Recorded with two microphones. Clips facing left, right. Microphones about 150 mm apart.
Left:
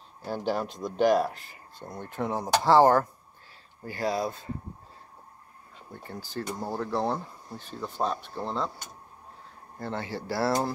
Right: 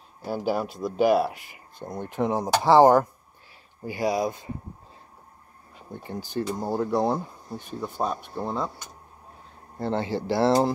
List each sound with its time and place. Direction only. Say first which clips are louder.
0.2 s speech: right 3 dB; 10° right (ahead or behind)
6.0 s speech: right 6 dB; 20° right (ahead or behind)
9.8 s speech: right 7 dB; 25° right (ahead or behind)